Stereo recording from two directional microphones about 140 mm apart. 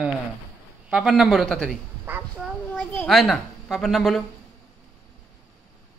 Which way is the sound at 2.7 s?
15° left (ahead or behind).